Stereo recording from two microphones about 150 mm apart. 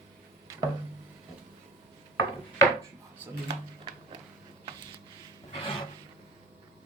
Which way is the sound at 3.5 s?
30° right (ahead or behind).